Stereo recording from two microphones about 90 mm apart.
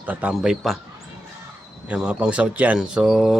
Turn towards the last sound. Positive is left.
turn(degrees=-10)  # may be behind; listen again after turning